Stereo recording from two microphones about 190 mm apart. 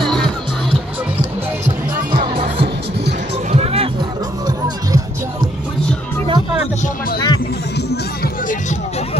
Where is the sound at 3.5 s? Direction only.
30° right (ahead or behind).